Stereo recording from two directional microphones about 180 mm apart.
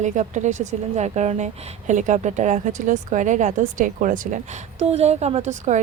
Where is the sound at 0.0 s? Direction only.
45° right (ahead or behind).